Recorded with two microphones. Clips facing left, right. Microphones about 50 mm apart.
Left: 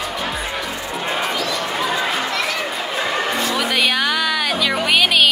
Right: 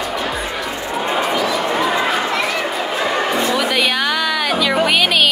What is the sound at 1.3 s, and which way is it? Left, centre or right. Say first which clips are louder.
Chatter: right 4 dB; centre.